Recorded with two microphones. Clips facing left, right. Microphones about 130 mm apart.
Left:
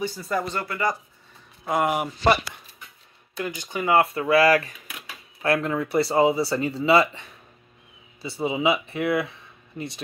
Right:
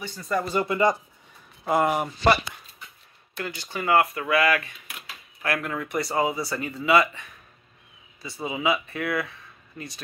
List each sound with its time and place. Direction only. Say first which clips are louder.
0.0 s speech: left 1 dB; 5° left (ahead or behind)
0.5 s speech: right 4 dB; 20° right (ahead or behind)
1.6 s speech: right 1 dB; centre (ahead or behind)
1.9 s speech: even; 15° left (ahead or behind)
3.3 s speech: left 3 dB; 15° left (ahead or behind)